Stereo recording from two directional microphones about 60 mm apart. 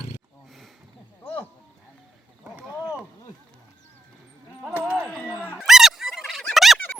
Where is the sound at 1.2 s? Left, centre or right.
Left.